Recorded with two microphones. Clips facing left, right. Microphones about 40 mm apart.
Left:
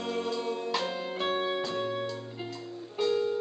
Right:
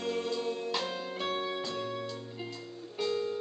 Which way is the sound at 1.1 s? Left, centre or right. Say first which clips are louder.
Left 4 dB; left.